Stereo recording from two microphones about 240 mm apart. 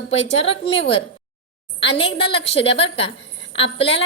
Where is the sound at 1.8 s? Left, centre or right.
Left.